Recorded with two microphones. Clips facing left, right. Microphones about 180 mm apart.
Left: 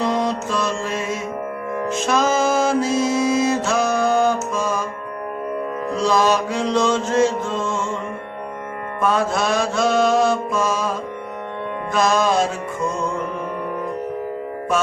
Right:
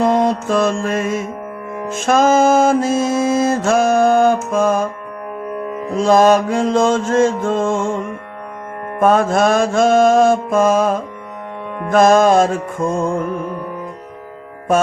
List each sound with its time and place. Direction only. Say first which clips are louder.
0.0 s music: right 6 dB; 50° right (ahead or behind)
6.0 s mantra: right 7 dB; 50° right (ahead or behind)
9.0 s mantra: right 7 dB; 50° right (ahead or behind)